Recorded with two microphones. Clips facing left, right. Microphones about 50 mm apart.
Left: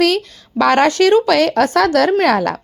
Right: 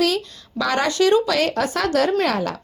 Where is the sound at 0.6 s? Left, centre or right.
Left.